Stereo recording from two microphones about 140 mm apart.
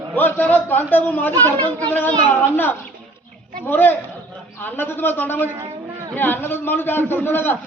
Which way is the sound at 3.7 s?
15° left (ahead or behind).